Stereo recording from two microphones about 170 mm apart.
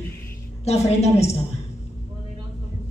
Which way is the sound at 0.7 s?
40° left (ahead or behind).